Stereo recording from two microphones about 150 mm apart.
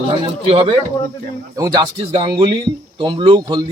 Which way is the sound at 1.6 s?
25° right (ahead or behind).